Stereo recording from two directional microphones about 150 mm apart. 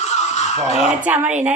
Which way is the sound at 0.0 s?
50° left (ahead or behind).